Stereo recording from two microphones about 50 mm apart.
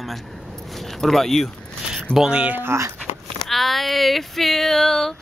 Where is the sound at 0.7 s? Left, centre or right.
Centre.